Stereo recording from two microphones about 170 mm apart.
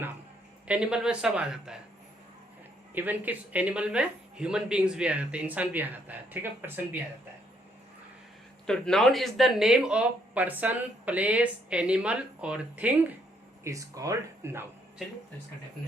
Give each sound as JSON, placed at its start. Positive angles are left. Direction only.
{"t": 0.7, "sound": "speech", "side_deg": -5}
{"t": 2.9, "sound": "speech", "side_deg": -10}
{"t": 8.6, "sound": "speech", "side_deg": 5}
{"t": 13.7, "sound": "speech", "side_deg": -20}